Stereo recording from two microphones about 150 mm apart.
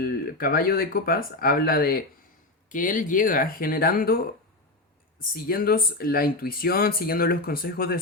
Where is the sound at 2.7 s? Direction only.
60° left (ahead or behind).